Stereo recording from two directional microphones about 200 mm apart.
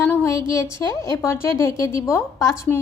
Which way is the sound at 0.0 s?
10° left (ahead or behind).